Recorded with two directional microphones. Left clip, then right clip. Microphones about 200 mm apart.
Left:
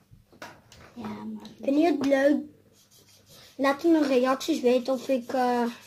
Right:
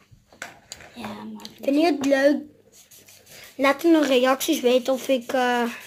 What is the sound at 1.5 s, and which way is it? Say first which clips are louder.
Speech: right 3 dB; 25° right (ahead or behind).